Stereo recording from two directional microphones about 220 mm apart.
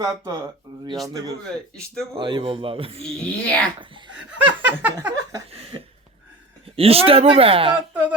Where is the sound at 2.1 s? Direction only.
20° right (ahead or behind).